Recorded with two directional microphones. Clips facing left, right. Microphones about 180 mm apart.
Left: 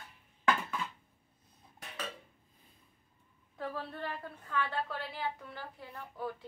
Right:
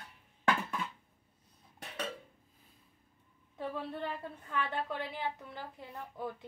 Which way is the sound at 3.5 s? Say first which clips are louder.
Right 1 dB; 20° right (ahead or behind).